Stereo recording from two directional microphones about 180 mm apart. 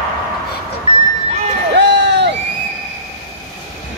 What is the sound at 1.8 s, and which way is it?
Crowd, 75° right (ahead or behind).